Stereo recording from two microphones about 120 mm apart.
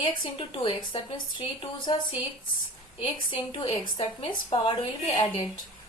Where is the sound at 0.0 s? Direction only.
45° left (ahead or behind).